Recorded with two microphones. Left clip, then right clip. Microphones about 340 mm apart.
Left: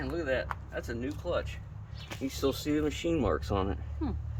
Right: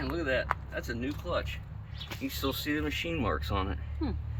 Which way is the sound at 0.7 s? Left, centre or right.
Centre.